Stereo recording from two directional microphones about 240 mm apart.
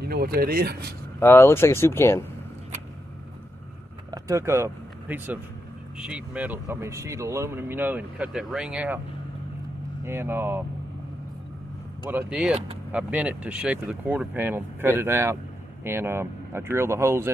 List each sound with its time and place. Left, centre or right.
0.0 s speech: right
1.2 s speech: centre
4.1 s speech: centre
10.0 s speech: centre
12.1 s speech: centre